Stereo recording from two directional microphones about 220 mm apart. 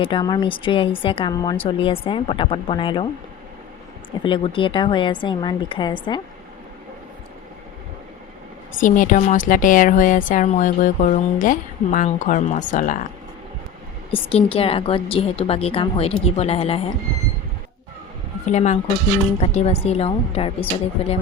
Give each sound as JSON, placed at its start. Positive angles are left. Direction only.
{"t": 0.0, "sound": "speech", "side_deg": 20}
{"t": 4.2, "sound": "speech", "side_deg": 25}
{"t": 8.8, "sound": "speech", "side_deg": 35}
{"t": 14.1, "sound": "speech", "side_deg": 25}
{"t": 18.5, "sound": "speech", "side_deg": 30}